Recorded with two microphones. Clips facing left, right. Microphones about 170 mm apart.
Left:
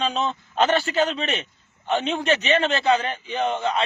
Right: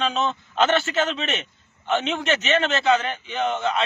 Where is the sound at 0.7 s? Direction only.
35° left (ahead or behind).